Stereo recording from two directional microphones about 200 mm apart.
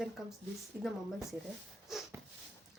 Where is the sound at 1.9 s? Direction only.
Centre (ahead or behind).